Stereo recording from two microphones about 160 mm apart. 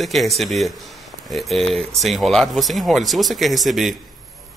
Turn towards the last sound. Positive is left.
turn(degrees=0)  # may be behind; listen again after turning